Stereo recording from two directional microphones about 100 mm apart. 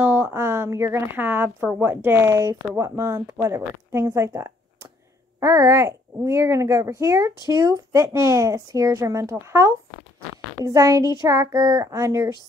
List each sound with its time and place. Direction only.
0.0 s speech: 25° right (ahead or behind); by 11.9 s 40° right (ahead or behind)
11.9 s speech: 30° right (ahead or behind)